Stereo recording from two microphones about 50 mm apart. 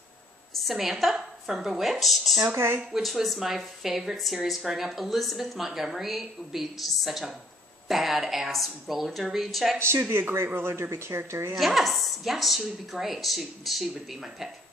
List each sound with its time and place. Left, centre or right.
0.6 s a woman's voice: centre
2.5 s speech: right
2.9 s a woman's voice: centre
9.8 s speech: right
11.5 s a woman's voice: centre